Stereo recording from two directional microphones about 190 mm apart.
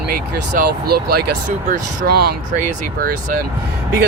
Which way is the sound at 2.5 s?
45° right (ahead or behind).